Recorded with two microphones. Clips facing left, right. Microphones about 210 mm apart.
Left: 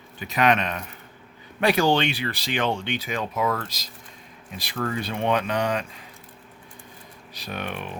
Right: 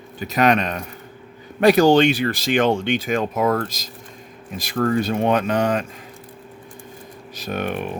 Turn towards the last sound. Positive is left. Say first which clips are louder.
# right 7 dB
turn(degrees=-50)  # may be behind; listen again after turning